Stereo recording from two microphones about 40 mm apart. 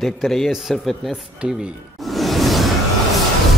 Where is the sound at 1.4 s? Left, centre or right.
Right.